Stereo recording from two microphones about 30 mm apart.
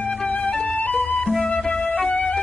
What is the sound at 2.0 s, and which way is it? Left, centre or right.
Music, left.